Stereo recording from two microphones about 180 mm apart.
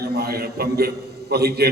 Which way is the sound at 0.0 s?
65° right (ahead or behind).